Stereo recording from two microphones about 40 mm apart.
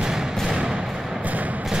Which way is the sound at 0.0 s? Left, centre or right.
Centre.